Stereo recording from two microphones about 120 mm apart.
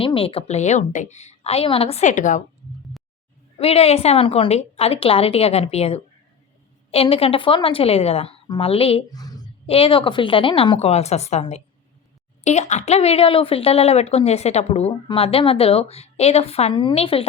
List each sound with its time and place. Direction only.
0.0 s a woman's voice: 50° left (ahead or behind); by 2.4 s 90° left
3.6 s a woman's voice: 55° left (ahead or behind)
9.1 s a sound: 30° left (ahead or behind)
9.6 s a woman's voice: 50° left (ahead or behind)
10.8 s a woman's voice: 60° left (ahead or behind)